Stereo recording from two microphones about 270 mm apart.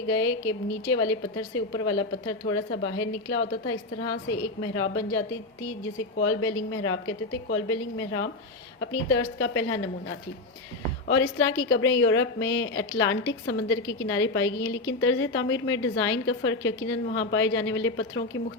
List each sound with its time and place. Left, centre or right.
0.2 s a woman's voice: left
2.5 s a woman's voice: left
6.2 s a woman's voice: left
11.1 s a woman's voice: left